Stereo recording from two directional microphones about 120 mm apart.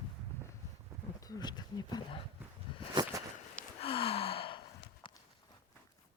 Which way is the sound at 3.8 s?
50° left (ahead or behind).